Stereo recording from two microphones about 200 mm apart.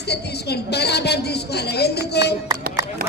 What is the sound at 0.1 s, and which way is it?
A woman's voice, 55° left (ahead or behind).